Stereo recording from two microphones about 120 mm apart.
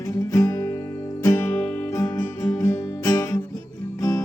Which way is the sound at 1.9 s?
30° left (ahead or behind).